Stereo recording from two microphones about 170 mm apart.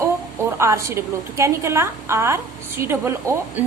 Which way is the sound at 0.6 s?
15° right (ahead or behind).